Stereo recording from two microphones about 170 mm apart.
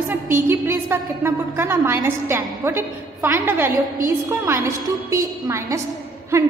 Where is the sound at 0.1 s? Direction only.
15° right (ahead or behind).